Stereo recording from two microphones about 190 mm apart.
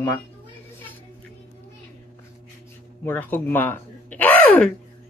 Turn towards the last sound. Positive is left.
turn(degrees=10)  # may be behind; listen again after turning